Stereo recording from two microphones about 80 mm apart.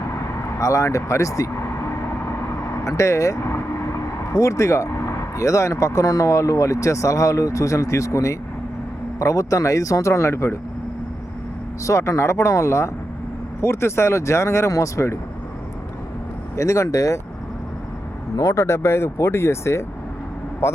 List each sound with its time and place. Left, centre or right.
0.6 s speech: left
2.8 s speech: left
11.9 s speech: left
16.6 s speech: left
18.3 s speech: left